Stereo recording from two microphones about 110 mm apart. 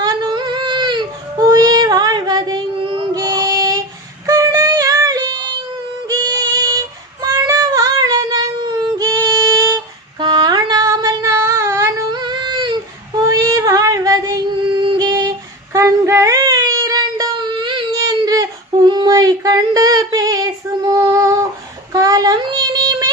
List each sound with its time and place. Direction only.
0.0 s a sound: 40° right (ahead or behind)
3.2 s child singing: 35° right (ahead or behind)
4.3 s yodeling: 30° right (ahead or behind)
6.1 s child singing: 40° right (ahead or behind)
10.2 s a sound: 45° right (ahead or behind); by 12.0 s 25° right (ahead or behind)
12.1 s female singing: 40° right (ahead or behind)
13.2 s a sound: 30° right (ahead or behind)
14.8 s female singing: 40° right (ahead or behind)
15.7 s child singing: 25° right (ahead or behind); by 17.8 s 45° right (ahead or behind)
17.9 s a sound: 35° right (ahead or behind)
18.9 s female singing: 35° right (ahead or behind)
21.9 s child singing: 35° right (ahead or behind)